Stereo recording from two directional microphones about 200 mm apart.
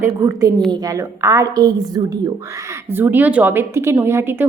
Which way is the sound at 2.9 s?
10° right (ahead or behind).